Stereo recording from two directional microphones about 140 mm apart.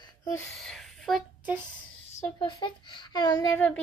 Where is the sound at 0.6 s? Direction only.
Centre (ahead or behind).